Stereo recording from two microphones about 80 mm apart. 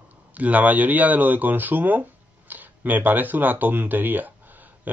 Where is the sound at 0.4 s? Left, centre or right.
Centre.